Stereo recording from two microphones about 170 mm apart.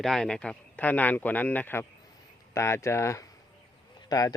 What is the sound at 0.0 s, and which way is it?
A man's voice, 5° left (ahead or behind).